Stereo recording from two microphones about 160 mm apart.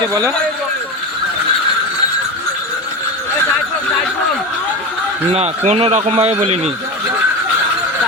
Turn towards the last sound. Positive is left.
turn(degrees=-40)  # may be behind; listen again after turning